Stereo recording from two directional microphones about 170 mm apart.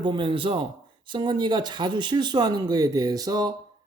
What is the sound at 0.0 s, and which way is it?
Speech, 30° right (ahead or behind).